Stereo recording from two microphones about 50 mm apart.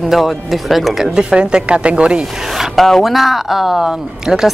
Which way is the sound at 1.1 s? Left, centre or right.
Centre.